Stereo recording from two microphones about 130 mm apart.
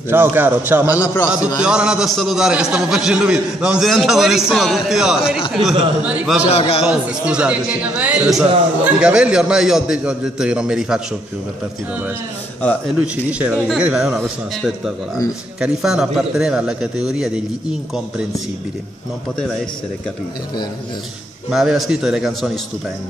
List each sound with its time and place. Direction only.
0.1 s a man's voice: 15° right (ahead or behind)
0.9 s a man's voice: 20° left (ahead or behind)
1.3 s a man's voice: 10° right (ahead or behind)
6.4 s a man's voice: 55° left (ahead or behind)
6.8 s a man's voice: 5° right (ahead or behind)
13.0 s a man's voice: 10° right (ahead or behind)
21.5 s a man's voice: 5° right (ahead or behind)